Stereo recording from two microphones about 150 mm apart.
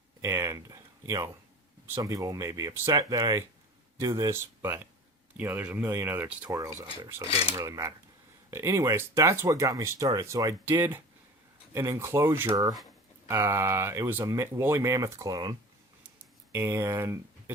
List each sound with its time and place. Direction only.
0.2 s speech: 20° right (ahead or behind)
16.5 s speech: 15° right (ahead or behind)